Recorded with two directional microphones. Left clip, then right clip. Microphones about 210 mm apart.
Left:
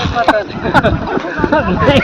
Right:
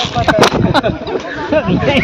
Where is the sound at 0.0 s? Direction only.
50° right (ahead or behind).